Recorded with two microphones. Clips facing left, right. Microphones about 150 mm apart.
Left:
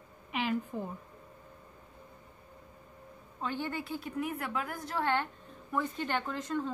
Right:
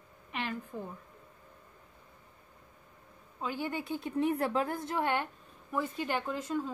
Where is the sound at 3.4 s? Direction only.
10° right (ahead or behind).